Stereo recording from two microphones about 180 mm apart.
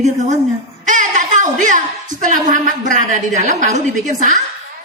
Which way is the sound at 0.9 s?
45° right (ahead or behind).